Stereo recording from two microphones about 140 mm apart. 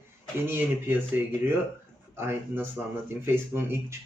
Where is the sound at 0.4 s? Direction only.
15° right (ahead or behind).